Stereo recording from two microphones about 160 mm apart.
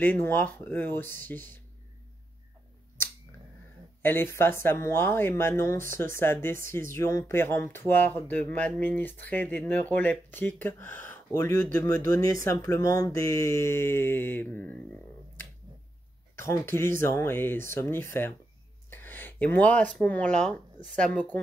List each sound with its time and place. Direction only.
0.0 s speech: 10° left (ahead or behind)
4.0 s speech: 15° left (ahead or behind)
16.3 s speech: 15° left (ahead or behind)